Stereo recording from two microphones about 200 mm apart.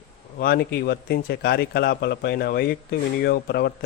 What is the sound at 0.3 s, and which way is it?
A man's voice, 50° left (ahead or behind).